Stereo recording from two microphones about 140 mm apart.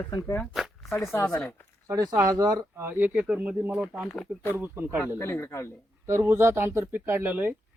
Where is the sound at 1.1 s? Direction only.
20° left (ahead or behind).